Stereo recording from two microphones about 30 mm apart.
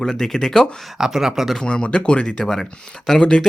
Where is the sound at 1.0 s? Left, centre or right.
Centre.